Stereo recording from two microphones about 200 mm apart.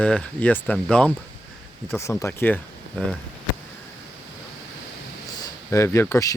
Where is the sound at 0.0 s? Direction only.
5° left (ahead or behind).